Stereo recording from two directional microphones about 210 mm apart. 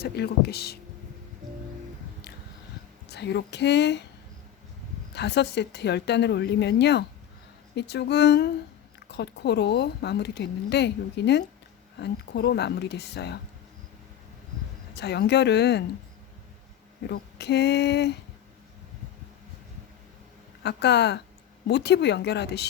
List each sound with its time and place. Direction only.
0.0 s speech: 50° left (ahead or behind)
3.1 s speech: 55° left (ahead or behind)
5.1 s speech: 55° left (ahead or behind)
14.9 s speech: 55° left (ahead or behind)
17.0 s speech: 55° left (ahead or behind)
20.7 s speech: 55° left (ahead or behind)